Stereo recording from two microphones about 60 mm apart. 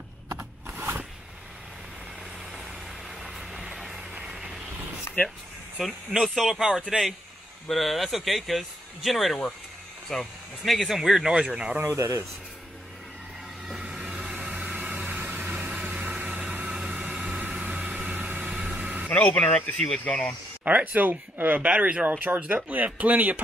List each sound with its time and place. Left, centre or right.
0.7 s shuffling cards: right
3.2 s vehicle: centre
3.5 s music: centre
4.1 s vehicle: centre
5.1 s a sound: left
6.1 s speech: centre
11.8 s speech: right
13.7 s vehicle: centre
19.0 s speech: left
19.5 s speech: centre
20.6 s speech: right
22.2 s speech: right